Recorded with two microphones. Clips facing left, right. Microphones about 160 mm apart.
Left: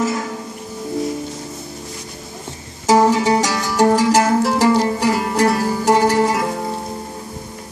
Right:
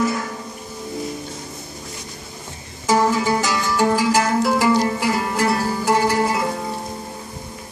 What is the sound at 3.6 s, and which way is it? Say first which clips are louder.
Music: left 4 dB; 40° left (ahead or behind).